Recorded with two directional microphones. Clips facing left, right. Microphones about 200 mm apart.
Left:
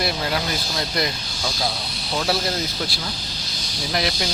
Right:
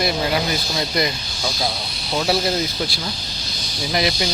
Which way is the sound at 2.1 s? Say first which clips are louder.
Right 3 dB; centre (ahead or behind).